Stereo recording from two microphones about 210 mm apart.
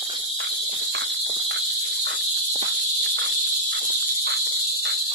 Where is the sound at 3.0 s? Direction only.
55° right (ahead or behind).